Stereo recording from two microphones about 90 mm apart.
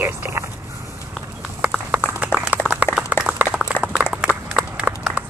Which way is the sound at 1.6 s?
15° right (ahead or behind).